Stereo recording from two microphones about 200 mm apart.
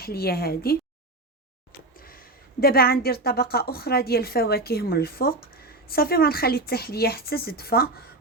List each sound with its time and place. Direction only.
0.0 s a woman's voice: 50° left (ahead or behind)
2.0 s a woman's voice: 45° left (ahead or behind)